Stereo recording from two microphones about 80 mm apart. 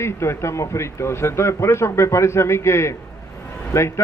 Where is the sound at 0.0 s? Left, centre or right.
Left.